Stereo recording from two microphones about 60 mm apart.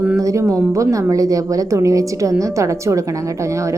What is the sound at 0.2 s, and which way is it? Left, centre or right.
A woman's voice, right.